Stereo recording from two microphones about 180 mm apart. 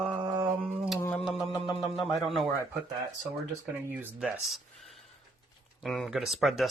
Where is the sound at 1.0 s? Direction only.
10° left (ahead or behind).